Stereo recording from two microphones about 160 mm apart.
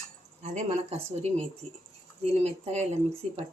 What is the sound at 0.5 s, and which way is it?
Speech, 45° right (ahead or behind).